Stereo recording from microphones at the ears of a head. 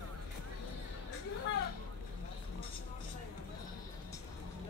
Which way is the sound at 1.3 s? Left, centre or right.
Left.